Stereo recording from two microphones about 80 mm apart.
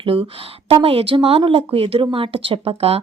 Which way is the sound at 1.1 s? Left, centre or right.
Right.